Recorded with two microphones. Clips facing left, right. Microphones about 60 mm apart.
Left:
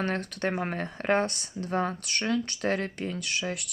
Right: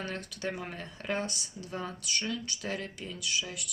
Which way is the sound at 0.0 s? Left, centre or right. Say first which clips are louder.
Left 7 dB; left.